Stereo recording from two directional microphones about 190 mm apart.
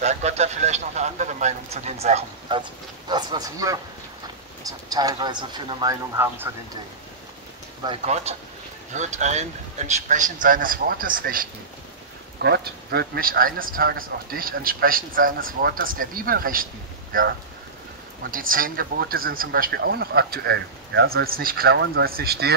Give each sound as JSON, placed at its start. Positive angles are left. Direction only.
{"t": 0.0, "sound": "a man's voice", "side_deg": -35}
{"t": 3.1, "sound": "speech", "side_deg": -20}
{"t": 8.0, "sound": "a man's voice", "side_deg": -35}
{"t": 12.4, "sound": "speech", "side_deg": -60}
{"t": 18.3, "sound": "speech", "side_deg": -45}